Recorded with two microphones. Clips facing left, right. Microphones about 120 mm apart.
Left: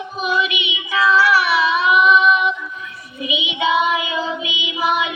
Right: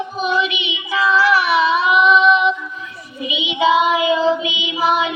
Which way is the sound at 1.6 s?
30° right (ahead or behind).